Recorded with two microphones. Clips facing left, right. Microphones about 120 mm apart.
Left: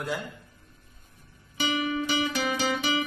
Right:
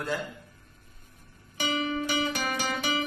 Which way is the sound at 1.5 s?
40° right (ahead or behind).